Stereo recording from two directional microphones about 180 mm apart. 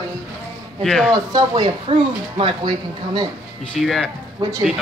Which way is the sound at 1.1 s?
25° right (ahead or behind).